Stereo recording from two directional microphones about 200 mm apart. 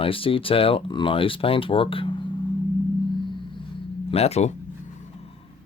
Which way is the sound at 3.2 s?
25° left (ahead or behind).